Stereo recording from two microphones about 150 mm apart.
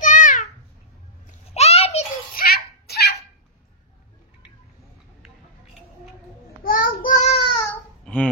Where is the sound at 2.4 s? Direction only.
85° left.